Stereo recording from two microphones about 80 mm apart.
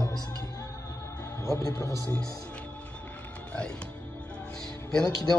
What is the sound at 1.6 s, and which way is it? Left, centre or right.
Speech, left.